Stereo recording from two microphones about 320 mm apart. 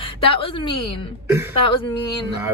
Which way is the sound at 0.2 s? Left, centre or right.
Centre.